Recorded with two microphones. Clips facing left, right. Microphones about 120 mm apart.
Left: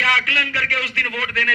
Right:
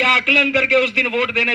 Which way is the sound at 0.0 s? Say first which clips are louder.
Right 5 dB; 60° right (ahead or behind).